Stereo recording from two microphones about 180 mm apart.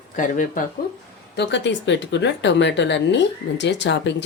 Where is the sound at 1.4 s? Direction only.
80° left.